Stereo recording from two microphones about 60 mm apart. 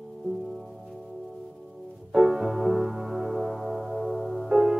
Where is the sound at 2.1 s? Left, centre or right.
Centre.